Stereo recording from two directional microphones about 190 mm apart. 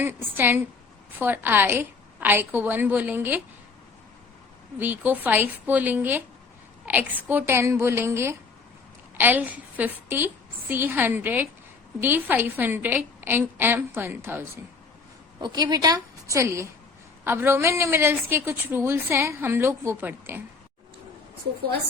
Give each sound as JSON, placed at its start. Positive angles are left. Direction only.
{"t": 0.0, "sound": "a woman's voice", "side_deg": -10}
{"t": 4.8, "sound": "a woman's voice", "side_deg": -10}
{"t": 15.4, "sound": "a woman's voice", "side_deg": -20}